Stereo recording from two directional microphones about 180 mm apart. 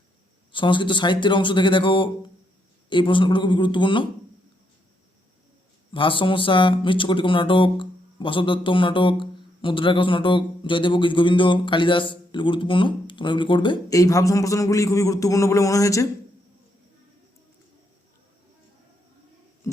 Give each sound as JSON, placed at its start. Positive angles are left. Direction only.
{"t": 0.5, "sound": "speech", "side_deg": 25}
{"t": 5.9, "sound": "speech", "side_deg": 30}